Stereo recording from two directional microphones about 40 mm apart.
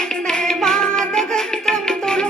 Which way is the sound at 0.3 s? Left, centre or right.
Centre.